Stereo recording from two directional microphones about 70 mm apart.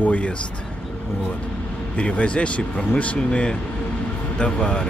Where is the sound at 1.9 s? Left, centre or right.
Centre.